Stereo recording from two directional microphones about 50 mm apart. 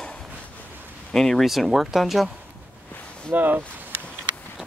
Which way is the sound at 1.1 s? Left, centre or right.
Centre.